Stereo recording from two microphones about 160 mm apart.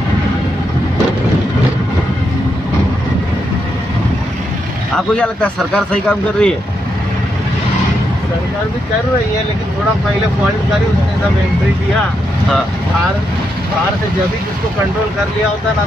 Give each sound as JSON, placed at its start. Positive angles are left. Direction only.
{"t": 4.9, "sound": "speech", "side_deg": 5}